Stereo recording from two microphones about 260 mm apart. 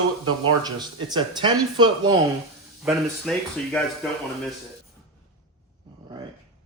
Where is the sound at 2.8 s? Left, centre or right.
Centre.